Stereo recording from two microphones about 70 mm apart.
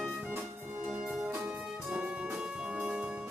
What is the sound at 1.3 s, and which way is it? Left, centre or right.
Music, right.